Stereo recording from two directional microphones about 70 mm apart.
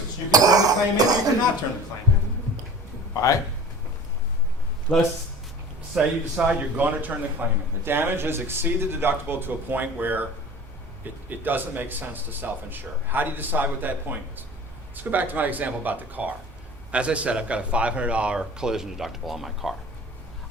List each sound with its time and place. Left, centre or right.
0.3 s speech: right
3.2 s speech: left
4.9 s speech: centre
5.9 s speech: centre
6.7 s a man's voice: right; by 19.7 s centre